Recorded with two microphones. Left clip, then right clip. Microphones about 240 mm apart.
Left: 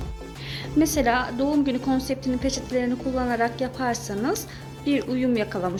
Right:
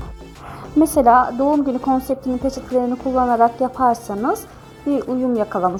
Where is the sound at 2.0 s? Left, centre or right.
Centre.